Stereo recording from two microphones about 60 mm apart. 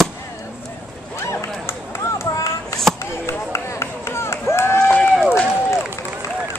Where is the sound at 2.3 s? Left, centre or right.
Left.